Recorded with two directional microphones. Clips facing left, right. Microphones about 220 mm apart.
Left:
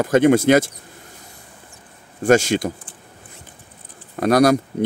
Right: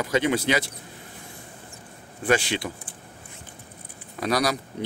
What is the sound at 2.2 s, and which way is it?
Speech, 45° left (ahead or behind).